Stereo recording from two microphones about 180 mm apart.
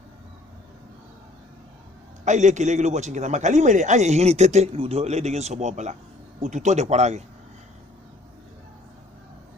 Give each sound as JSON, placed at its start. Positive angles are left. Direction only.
{"t": 2.2, "sound": "a man's voice", "side_deg": -40}